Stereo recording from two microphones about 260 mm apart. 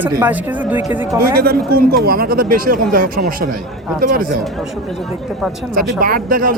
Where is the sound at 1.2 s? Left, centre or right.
Right.